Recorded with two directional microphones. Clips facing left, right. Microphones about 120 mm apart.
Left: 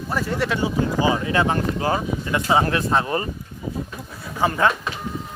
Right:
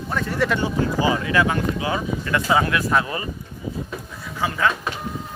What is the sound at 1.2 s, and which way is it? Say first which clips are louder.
Speech: even; 30° left (ahead or behind).